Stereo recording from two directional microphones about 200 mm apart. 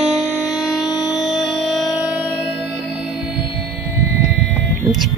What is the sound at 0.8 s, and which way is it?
Music, 20° left (ahead or behind).